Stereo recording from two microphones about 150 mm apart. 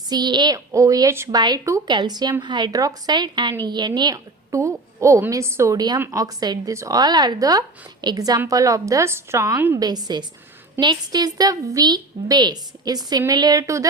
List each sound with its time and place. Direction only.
0.1 s a woman's voice: 30° right (ahead or behind)